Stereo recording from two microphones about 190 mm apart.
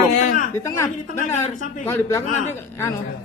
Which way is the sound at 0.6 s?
15° left (ahead or behind).